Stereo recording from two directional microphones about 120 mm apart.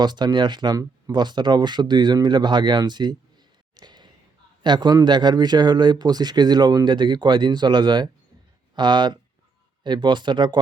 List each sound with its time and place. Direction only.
0.0 s speech: 35° right (ahead or behind)
3.8 s a sound: 35° right (ahead or behind)
4.6 s speech: 35° right (ahead or behind)